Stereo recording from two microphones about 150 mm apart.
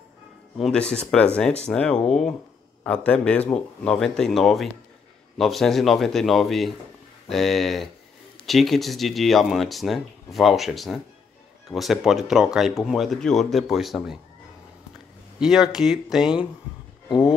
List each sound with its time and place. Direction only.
0.6 s a man's voice: 5° left (ahead or behind)
15.3 s speech: 5° right (ahead or behind)